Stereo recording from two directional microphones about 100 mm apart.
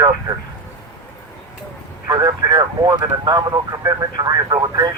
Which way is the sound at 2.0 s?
40° right (ahead or behind).